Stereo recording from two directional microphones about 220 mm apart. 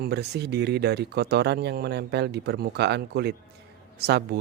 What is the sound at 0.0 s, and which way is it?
Speech, 50° right (ahead or behind).